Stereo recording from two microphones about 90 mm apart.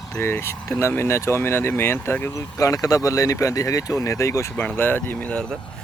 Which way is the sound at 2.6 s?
40° left (ahead or behind).